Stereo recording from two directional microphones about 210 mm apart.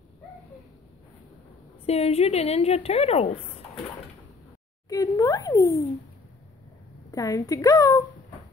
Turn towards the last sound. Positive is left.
turn(degrees=15)  # may be behind; listen again after turning